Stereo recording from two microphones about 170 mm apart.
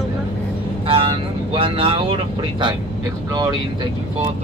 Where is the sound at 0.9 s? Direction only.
30° right (ahead or behind).